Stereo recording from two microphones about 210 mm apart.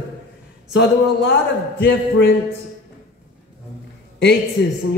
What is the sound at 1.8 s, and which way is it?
Speech, 60° left (ahead or behind).